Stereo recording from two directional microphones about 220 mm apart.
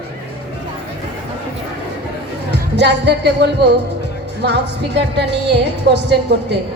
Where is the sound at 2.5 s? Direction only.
50° right (ahead or behind).